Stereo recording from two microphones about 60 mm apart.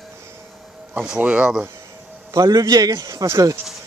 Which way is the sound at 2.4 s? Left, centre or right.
Right.